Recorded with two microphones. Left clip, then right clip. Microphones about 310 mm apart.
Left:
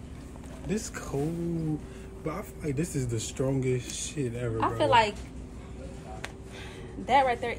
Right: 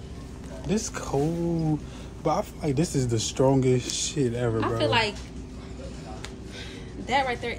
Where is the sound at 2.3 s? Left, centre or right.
Centre.